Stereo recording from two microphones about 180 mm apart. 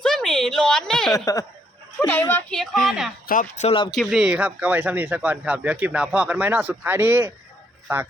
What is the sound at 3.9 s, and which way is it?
Speech, centre (ahead or behind).